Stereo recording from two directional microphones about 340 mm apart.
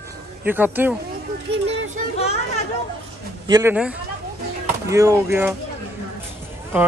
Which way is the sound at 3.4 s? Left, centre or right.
Centre.